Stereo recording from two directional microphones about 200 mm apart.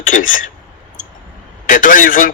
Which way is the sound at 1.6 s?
40° left (ahead or behind).